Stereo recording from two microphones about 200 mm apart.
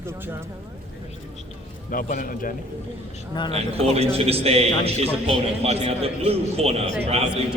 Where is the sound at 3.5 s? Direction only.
30° right (ahead or behind).